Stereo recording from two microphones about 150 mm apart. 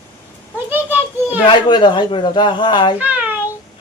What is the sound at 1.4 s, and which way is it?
Speech, 30° left (ahead or behind).